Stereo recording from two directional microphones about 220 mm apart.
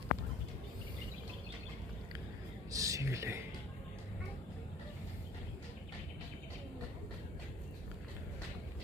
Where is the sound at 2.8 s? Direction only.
15° right (ahead or behind).